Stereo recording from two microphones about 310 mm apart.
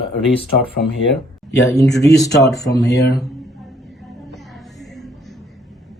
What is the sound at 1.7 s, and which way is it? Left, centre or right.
Speech, centre.